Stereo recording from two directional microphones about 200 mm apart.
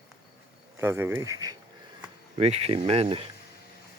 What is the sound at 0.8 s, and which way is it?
Speech, 10° right (ahead or behind).